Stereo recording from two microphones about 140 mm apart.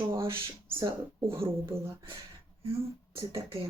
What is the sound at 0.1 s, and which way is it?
A woman's voice, 20° right (ahead or behind).